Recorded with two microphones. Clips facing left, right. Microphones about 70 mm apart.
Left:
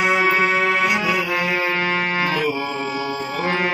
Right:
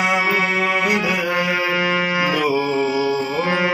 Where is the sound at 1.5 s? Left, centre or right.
Centre.